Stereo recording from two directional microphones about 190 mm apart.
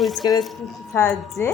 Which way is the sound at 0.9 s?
15° left (ahead or behind).